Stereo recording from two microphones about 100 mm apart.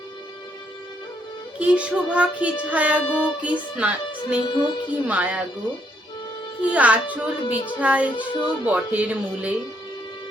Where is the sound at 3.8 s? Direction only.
15° right (ahead or behind).